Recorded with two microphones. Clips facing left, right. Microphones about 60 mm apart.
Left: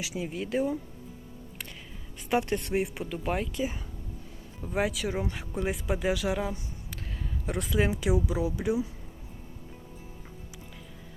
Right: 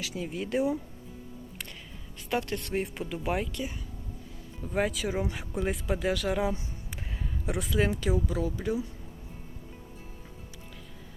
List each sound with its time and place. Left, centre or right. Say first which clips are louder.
0.0 s speech: left 1 dB; centre
0.3 s speech: right 1 dB; centre
2.3 s speech: left 3 dB; left
2.7 s speech: left 2 dB; centre
4.6 s speech: even; centre
7.4 s speech: even; centre